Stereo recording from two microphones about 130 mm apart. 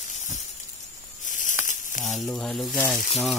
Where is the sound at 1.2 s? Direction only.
80° left.